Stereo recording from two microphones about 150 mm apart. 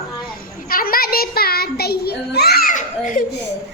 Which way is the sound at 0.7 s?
75° left (ahead or behind).